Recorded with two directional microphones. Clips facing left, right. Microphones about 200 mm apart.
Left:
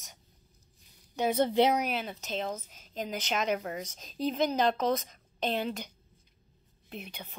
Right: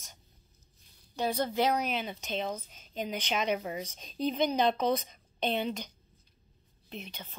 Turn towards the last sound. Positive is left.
turn(degrees=10)  # may be behind; listen again after turning